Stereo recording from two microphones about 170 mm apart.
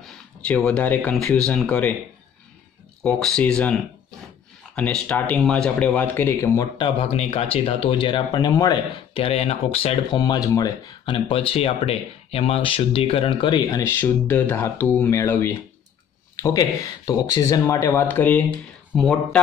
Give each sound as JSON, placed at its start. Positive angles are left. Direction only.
{"t": 0.0, "sound": "speech", "side_deg": 5}
{"t": 3.0, "sound": "speech", "side_deg": 5}
{"t": 7.0, "sound": "speech", "side_deg": 35}
{"t": 10.1, "sound": "speech", "side_deg": 25}